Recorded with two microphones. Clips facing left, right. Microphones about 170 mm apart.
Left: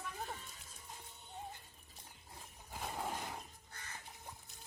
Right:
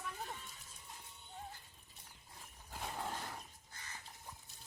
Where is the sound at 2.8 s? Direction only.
10° left (ahead or behind).